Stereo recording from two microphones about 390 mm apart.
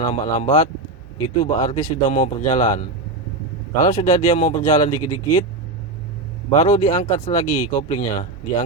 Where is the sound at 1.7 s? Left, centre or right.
Centre.